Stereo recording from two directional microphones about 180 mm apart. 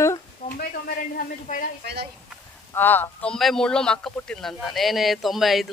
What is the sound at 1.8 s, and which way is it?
Speech, 65° right (ahead or behind).